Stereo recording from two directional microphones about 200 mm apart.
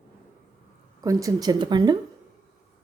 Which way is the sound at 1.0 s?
15° right (ahead or behind).